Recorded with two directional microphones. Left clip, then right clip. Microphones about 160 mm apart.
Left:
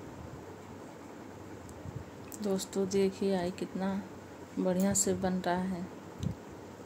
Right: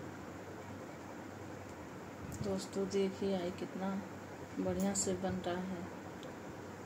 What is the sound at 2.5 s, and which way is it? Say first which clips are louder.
Speech: left 5 dB; 90° left.